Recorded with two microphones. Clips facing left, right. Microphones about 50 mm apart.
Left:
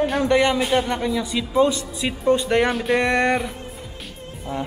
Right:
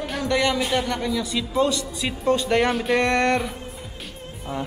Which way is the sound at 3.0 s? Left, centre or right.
Centre.